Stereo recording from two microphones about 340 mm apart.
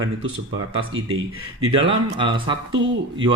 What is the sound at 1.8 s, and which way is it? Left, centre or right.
Speech, centre.